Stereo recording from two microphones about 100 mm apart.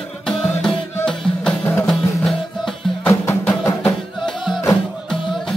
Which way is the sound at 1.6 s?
25° left (ahead or behind).